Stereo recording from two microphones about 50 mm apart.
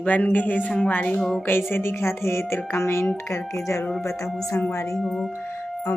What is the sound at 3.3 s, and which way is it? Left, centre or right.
Speech, left.